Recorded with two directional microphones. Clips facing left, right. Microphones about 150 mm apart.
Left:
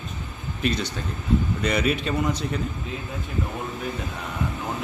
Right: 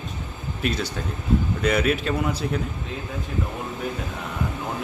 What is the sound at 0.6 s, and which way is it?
Speech, 5° right (ahead or behind).